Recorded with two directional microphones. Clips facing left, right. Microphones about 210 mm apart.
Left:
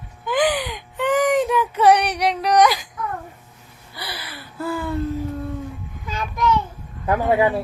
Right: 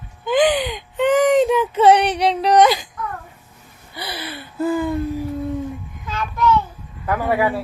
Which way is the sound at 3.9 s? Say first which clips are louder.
Right 5 dB; 25° right (ahead or behind).